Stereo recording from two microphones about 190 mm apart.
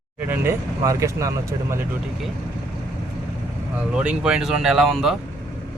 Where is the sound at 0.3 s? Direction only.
15° right (ahead or behind).